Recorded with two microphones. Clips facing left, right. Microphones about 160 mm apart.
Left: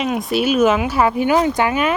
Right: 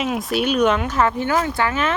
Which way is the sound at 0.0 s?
Centre (ahead or behind).